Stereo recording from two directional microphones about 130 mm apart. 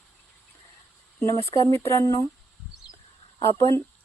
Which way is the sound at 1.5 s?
50° right (ahead or behind).